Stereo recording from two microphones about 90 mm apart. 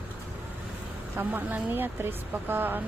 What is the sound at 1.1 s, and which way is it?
Speech, 20° right (ahead or behind).